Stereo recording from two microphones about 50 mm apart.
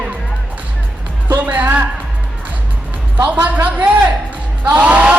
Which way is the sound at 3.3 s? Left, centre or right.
Right.